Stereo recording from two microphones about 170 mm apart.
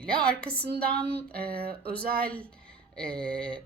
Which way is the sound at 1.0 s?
70° right (ahead or behind).